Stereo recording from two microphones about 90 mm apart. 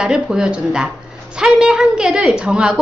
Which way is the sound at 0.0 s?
5° right (ahead or behind).